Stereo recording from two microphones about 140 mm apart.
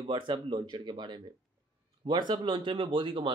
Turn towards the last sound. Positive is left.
turn(degrees=-35)  # may be behind; listen again after turning